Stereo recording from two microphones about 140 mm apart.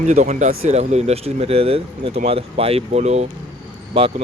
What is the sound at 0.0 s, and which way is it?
Speech, 60° right (ahead or behind).